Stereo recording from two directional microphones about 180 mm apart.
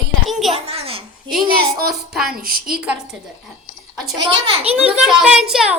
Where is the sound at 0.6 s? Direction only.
35° right (ahead or behind).